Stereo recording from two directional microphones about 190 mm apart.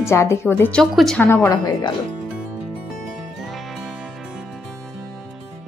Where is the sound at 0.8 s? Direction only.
Centre (ahead or behind).